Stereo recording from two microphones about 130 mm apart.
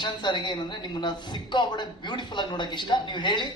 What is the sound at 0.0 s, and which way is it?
A woman's voice, 35° left (ahead or behind).